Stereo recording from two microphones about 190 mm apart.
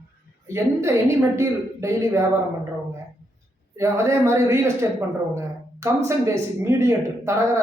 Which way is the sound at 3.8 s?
15° right (ahead or behind).